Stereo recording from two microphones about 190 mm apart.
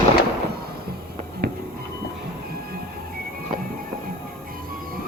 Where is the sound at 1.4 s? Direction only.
60° right (ahead or behind).